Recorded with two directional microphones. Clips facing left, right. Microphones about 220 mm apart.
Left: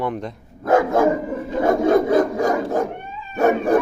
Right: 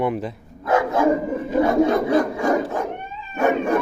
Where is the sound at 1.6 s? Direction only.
50° left (ahead or behind).